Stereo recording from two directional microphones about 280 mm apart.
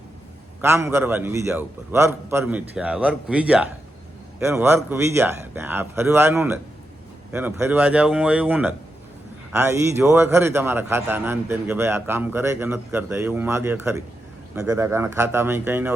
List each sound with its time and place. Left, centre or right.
0.6 s a man's voice: centre